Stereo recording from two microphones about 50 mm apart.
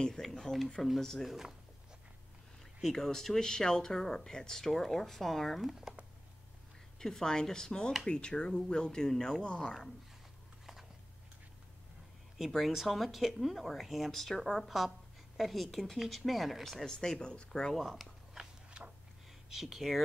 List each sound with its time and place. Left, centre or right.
0.0 s speech: centre
1.2 s speech: centre
2.8 s speech: centre
5.7 s speech: centre
7.0 s speech: centre
12.4 s speech: centre
17.7 s a sound: centre
19.5 s speech: centre